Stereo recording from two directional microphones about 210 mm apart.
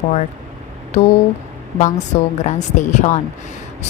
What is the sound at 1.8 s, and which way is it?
A woman's voice, 35° left (ahead or behind).